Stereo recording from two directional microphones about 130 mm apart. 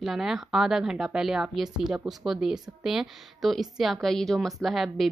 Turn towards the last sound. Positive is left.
turn(degrees=0)  # may be behind; listen again after turning